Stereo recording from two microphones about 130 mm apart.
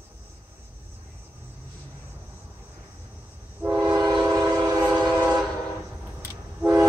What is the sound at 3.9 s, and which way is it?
Train, 25° right (ahead or behind).